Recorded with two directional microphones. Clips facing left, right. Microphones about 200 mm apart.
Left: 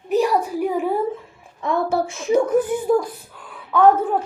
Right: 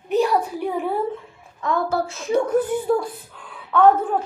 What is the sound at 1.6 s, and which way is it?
Speech, 25° left (ahead or behind).